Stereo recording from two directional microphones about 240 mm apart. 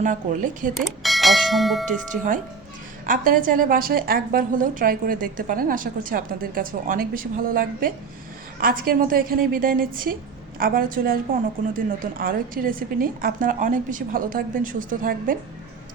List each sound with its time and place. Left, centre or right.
0.0 s a woman's voice: right
0.7 s bell: centre
3.1 s a woman's voice: right